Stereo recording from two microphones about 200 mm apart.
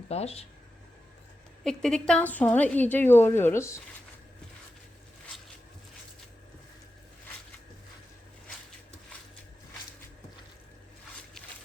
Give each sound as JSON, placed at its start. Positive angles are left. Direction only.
{"t": 0.1, "sound": "speech", "side_deg": 30}
{"t": 1.6, "sound": "a woman's voice", "side_deg": 5}